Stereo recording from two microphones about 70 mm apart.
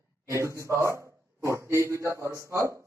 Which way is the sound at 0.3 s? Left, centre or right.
Right.